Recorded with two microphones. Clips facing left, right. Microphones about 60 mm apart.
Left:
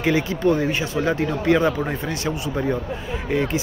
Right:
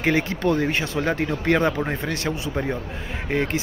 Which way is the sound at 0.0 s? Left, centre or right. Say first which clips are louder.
Left 2 dB; right.